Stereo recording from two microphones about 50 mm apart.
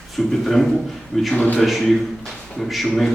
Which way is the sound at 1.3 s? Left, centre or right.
Left.